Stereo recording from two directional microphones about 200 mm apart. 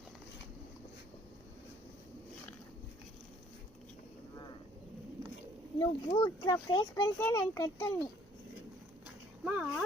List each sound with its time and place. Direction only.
5.8 s a child's voice: 20° left (ahead or behind)
9.4 s speech: 5° right (ahead or behind)